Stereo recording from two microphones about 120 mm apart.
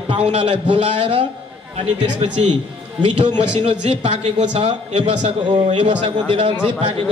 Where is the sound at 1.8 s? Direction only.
70° right (ahead or behind).